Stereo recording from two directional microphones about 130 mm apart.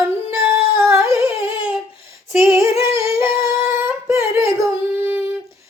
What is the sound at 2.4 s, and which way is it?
Female singing, 20° right (ahead or behind).